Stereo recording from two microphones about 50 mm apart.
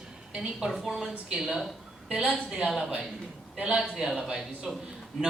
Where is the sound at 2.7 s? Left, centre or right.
Centre.